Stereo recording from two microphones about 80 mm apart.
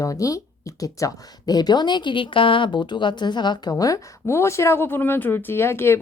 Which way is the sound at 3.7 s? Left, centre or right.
Left.